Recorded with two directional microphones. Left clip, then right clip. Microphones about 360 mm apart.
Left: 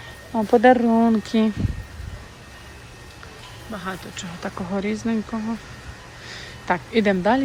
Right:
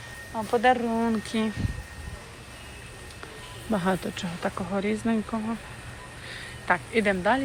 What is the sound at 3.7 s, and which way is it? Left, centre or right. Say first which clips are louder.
Speech: right 4 dB; centre.